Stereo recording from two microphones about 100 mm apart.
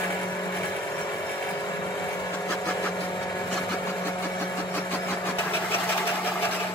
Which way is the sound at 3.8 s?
25° left (ahead or behind).